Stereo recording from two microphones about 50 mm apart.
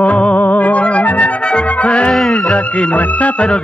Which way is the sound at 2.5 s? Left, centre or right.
Left.